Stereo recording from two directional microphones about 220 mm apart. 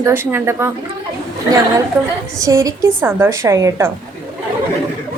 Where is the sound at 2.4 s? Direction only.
15° right (ahead or behind).